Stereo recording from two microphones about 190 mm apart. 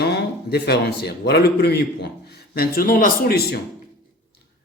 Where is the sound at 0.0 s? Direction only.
60° left (ahead or behind).